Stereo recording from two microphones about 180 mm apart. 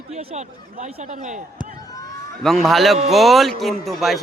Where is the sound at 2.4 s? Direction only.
Centre (ahead or behind).